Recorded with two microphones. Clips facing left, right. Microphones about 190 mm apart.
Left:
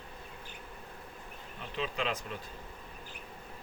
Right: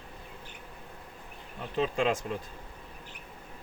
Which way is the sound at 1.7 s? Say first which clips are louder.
Right 7 dB; 45° right (ahead or behind).